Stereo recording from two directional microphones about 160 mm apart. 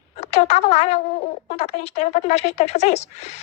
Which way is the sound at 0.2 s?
45° left (ahead or behind).